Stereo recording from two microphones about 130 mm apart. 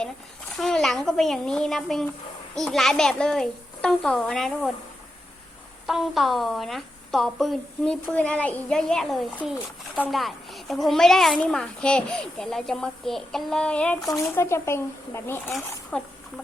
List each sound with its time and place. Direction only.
0.5 s a child's voice: 5° left (ahead or behind)
5.8 s a child's voice: centre (ahead or behind)
14.3 s speech: 20° left (ahead or behind)
15.9 s a woman's voice: 5° left (ahead or behind)